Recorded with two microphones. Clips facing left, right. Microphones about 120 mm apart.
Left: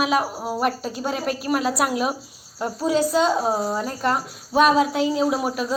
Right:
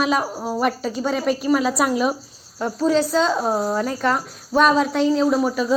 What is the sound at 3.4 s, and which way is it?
A woman's voice, centre (ahead or behind).